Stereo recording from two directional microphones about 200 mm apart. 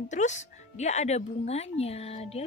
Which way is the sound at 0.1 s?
35° left (ahead or behind).